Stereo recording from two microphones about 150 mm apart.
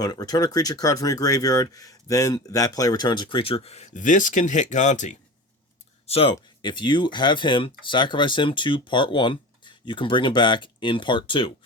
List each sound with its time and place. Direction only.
0.0 s speech: 25° left (ahead or behind); by 5.1 s 55° left (ahead or behind)
6.1 s speech: 40° left (ahead or behind)
6.3 s speech: 30° left (ahead or behind)